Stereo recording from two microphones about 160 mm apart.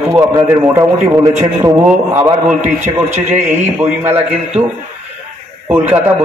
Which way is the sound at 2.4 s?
50° right (ahead or behind).